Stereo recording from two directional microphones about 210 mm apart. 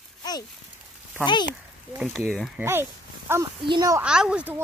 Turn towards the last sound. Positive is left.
turn(degrees=-5)  # may be behind; listen again after turning